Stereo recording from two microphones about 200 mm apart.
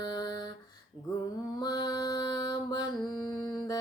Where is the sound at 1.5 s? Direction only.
20° left (ahead or behind).